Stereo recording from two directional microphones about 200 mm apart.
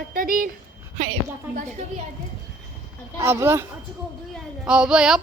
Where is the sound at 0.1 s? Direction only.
45° right (ahead or behind).